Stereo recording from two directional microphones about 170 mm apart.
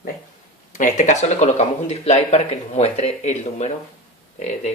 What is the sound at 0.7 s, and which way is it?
Speech, 45° left (ahead or behind).